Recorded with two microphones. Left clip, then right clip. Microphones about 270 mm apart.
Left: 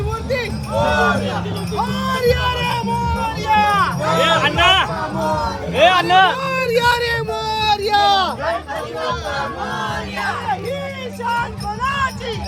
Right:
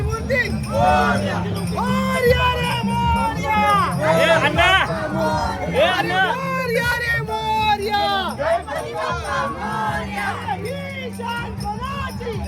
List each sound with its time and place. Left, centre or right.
0.3 s music: centre
5.7 s music: centre
6.5 s a sound: centre
7.5 s music: centre